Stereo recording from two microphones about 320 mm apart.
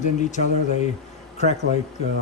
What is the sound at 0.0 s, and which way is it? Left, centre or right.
Speech, left.